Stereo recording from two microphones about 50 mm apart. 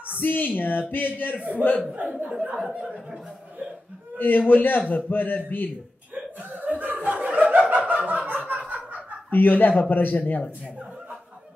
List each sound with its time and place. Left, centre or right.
0.2 s speech: left
2.0 s speech: right
4.2 s speech: left
6.5 s chuckle: right
9.3 s speech: left